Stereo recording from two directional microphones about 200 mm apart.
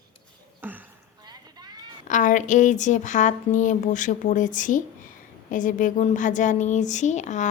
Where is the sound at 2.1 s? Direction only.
40° left (ahead or behind).